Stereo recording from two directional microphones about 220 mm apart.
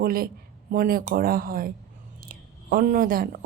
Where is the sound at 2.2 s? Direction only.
40° right (ahead or behind).